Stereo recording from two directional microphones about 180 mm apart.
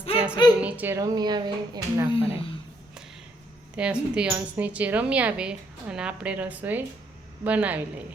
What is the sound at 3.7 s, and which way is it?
Speech, 5° right (ahead or behind).